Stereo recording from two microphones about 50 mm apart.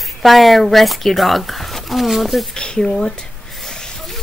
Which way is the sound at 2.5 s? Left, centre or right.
Centre.